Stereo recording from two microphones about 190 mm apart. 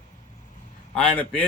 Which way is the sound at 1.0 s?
5° left (ahead or behind).